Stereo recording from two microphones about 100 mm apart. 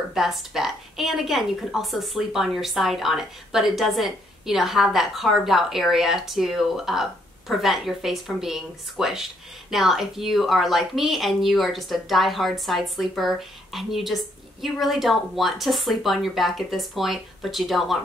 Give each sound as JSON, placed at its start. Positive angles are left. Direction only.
{"t": 0.1, "sound": "a woman's voice", "side_deg": 0}